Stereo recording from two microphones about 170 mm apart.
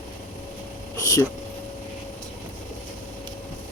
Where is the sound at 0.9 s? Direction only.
20° left (ahead or behind).